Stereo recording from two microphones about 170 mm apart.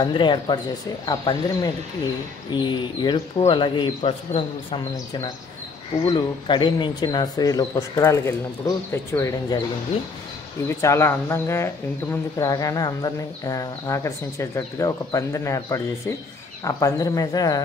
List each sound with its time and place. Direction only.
0.0 s speech: 30° left (ahead or behind)
6.0 s speech: 25° left (ahead or behind)
10.8 s speech: 15° left (ahead or behind)